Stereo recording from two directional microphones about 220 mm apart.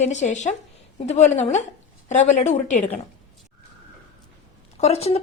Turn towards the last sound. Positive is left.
turn(degrees=30)  # may be behind; listen again after turning